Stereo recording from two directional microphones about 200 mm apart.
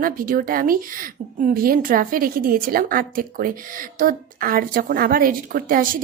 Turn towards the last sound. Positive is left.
turn(degrees=-45)  # may be behind; listen again after turning